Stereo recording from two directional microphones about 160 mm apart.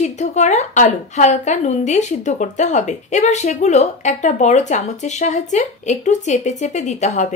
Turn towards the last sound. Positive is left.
turn(degrees=45)  # may be behind; listen again after turning